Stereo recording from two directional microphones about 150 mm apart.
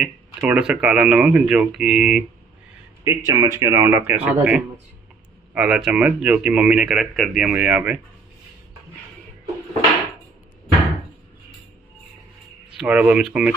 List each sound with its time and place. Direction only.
0.0 s speech: 5° right (ahead or behind)
3.0 s speech: 20° right (ahead or behind)
12.7 s speech: 10° right (ahead or behind)